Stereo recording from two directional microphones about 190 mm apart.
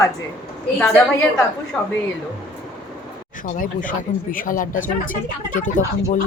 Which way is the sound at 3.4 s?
45° left (ahead or behind).